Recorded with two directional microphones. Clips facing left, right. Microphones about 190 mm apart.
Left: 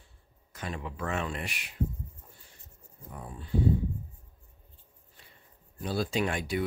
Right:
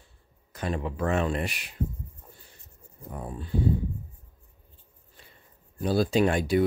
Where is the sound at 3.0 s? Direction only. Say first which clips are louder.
Right 6 dB; 50° right (ahead or behind).